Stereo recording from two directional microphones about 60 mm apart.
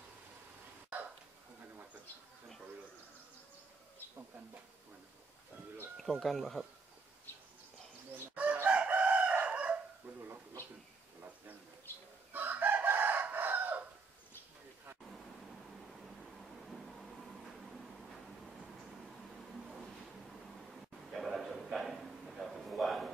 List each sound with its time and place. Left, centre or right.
5.9 s speech: centre
7.3 s bird: left
8.6 s chicken: right
10.0 s dog: right
12.3 s chicken: right
15.9 s a sound: centre
21.1 s a sound: centre